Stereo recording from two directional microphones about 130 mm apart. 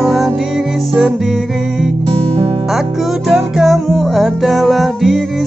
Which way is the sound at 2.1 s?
40° right (ahead or behind).